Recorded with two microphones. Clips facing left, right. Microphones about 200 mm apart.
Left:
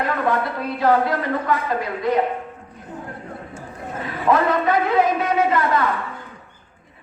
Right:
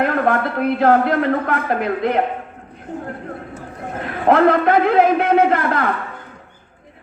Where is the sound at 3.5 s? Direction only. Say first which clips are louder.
Right 3 dB; 60° right (ahead or behind).